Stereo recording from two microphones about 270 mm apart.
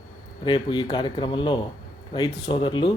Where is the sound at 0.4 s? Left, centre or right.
Centre.